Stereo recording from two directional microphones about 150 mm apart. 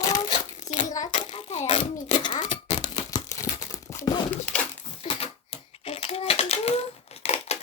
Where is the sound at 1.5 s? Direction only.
50° left (ahead or behind).